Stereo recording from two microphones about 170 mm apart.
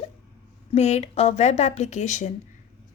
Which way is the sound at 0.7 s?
40° left (ahead or behind).